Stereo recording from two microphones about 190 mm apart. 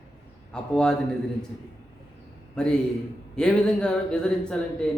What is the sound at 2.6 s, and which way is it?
Speech, 5° left (ahead or behind).